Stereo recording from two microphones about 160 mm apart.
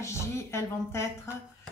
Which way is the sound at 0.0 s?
15° left (ahead or behind).